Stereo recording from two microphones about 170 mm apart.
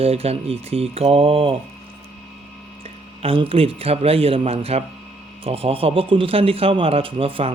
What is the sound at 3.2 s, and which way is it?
Speech, 35° right (ahead or behind).